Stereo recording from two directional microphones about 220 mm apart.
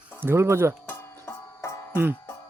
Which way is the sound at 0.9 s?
10° left (ahead or behind).